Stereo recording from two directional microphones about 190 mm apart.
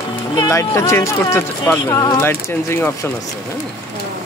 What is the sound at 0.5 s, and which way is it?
Speech, 15° left (ahead or behind).